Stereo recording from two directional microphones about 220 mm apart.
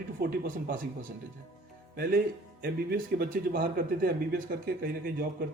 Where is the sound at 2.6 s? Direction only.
40° right (ahead or behind).